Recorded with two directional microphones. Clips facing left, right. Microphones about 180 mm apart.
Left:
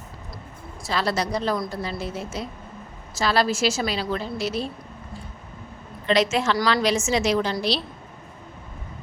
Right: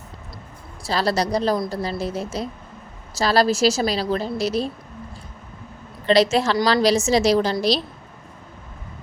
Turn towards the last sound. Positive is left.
turn(degrees=-40)  # may be behind; listen again after turning